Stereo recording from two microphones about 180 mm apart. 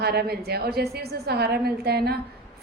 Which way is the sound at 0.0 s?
60° right (ahead or behind).